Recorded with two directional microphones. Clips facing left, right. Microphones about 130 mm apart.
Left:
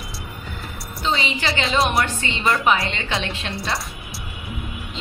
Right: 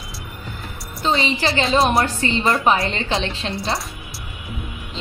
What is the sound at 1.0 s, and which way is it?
A woman's voice, 30° right (ahead or behind).